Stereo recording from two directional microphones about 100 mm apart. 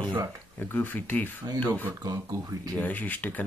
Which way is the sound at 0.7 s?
20° left (ahead or behind).